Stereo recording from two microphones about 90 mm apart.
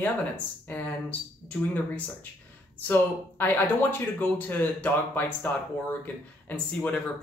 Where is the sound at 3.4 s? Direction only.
20° left (ahead or behind).